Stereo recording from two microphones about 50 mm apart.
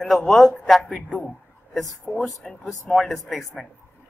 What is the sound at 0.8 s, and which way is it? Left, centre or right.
Speech, left.